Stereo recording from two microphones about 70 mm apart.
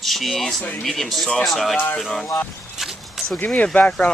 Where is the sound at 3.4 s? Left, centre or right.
Centre.